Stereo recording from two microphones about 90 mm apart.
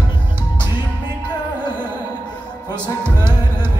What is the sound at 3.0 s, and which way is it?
Music, 25° right (ahead or behind).